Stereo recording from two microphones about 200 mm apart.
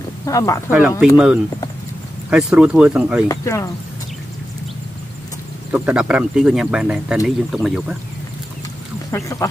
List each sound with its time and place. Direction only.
0.2 s speech: 15° left (ahead or behind)
0.7 s speech: 5° right (ahead or behind)
3.3 s speech: 15° left (ahead or behind)
5.7 s speech: 5° right (ahead or behind)
9.1 s speech: 15° left (ahead or behind)